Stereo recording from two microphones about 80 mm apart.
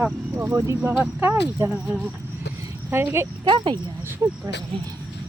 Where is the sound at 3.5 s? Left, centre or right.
Right.